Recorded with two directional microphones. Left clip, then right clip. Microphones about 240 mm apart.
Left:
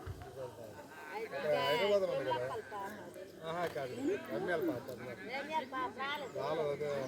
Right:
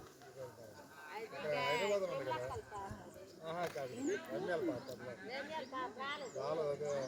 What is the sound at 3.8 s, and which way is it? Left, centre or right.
Speech, left.